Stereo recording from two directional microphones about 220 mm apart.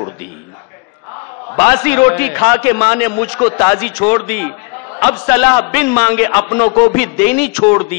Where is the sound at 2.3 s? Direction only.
20° left (ahead or behind).